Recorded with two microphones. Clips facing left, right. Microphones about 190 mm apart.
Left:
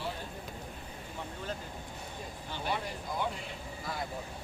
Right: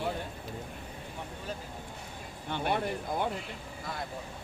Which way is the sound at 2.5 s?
60° right (ahead or behind).